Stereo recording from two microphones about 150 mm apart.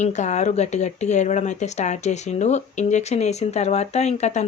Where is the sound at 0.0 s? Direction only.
50° left (ahead or behind).